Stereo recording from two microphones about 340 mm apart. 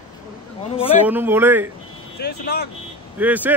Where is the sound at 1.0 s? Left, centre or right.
Centre.